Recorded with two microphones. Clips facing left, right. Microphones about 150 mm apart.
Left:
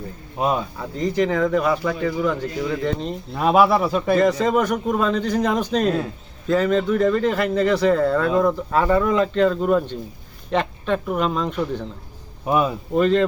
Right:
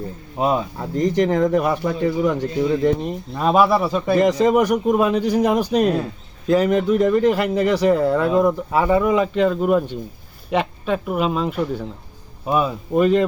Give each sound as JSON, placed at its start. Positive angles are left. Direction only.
{"t": 1.3, "sound": "speech", "side_deg": -20}
{"t": 1.5, "sound": "speech", "side_deg": -45}
{"t": 1.9, "sound": "speech", "side_deg": -25}
{"t": 3.3, "sound": "speech", "side_deg": 5}
{"t": 4.1, "sound": "speech", "side_deg": -15}
{"t": 12.5, "sound": "speech", "side_deg": 5}
{"t": 12.9, "sound": "speech", "side_deg": -10}